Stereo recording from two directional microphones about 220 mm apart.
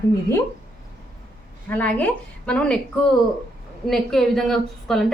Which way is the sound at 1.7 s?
5° left (ahead or behind).